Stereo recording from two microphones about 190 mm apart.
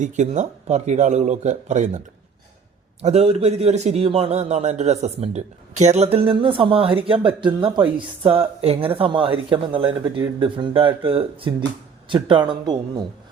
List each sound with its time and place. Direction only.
0.0 s a man's voice: 40° right (ahead or behind)
3.0 s a man's voice: 35° right (ahead or behind)